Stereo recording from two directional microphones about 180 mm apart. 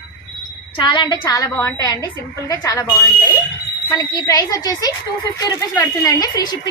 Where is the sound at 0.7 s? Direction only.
25° left (ahead or behind).